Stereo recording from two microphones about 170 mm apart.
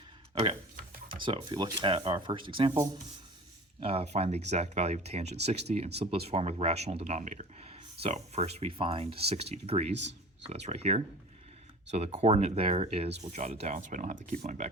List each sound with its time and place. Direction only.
0.8 s a sound: 55° right (ahead or behind)
1.2 s speech: 30° right (ahead or behind)
3.8 s speech: 35° right (ahead or behind)
9.9 s speech: 90° right
10.4 s speech: 40° right (ahead or behind)